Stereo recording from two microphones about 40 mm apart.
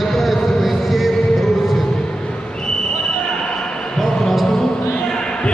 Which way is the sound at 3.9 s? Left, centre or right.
Centre.